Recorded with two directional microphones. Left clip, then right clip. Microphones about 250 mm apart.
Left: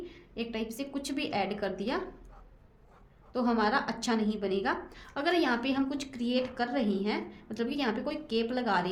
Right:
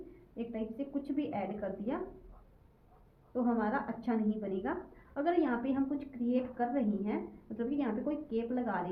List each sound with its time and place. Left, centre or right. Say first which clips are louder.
0.3 s a woman's voice: left 4 dB; left
3.3 s a woman's voice: left 5 dB; left